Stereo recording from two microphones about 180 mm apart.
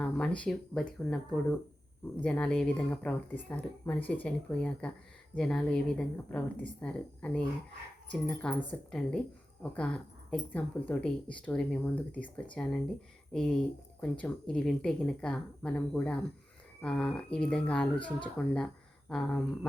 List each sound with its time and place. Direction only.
0.0 s speech: 5° left (ahead or behind)